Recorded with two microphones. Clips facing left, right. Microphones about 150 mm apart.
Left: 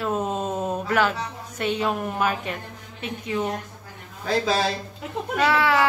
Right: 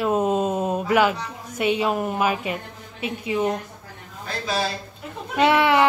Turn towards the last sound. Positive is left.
turn(degrees=-20)  # may be behind; listen again after turning